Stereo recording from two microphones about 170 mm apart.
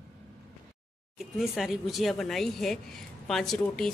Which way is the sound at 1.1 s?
Centre (ahead or behind).